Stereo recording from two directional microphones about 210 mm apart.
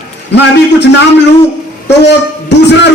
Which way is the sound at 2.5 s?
55° left (ahead or behind).